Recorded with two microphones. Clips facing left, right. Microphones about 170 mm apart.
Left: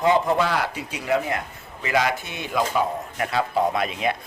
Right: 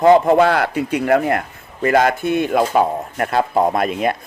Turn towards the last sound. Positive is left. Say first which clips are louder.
# right 6 dB
turn(degrees=-50)  # may be behind; listen again after turning